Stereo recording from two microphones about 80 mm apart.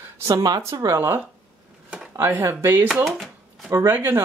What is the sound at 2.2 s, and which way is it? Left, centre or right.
Speech, right.